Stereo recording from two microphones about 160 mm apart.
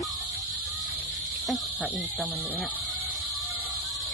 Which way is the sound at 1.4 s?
10° left (ahead or behind).